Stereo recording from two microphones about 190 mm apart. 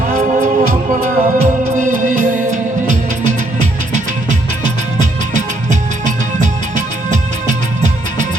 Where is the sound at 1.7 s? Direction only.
40° right (ahead or behind).